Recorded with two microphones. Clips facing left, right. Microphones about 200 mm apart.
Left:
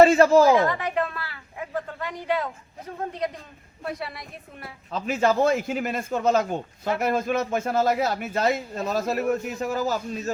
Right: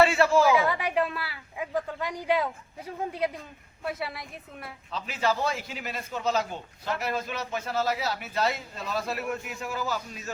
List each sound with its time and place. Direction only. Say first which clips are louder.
0.0 s speech: left 6 dB; 40° left (ahead or behind)
0.6 s a woman's voice: left 2 dB; 10° right (ahead or behind)
4.9 s a man's voice: left 6 dB; 50° left (ahead or behind)